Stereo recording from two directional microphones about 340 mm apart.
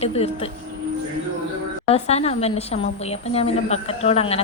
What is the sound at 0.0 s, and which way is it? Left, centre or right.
Speech, centre.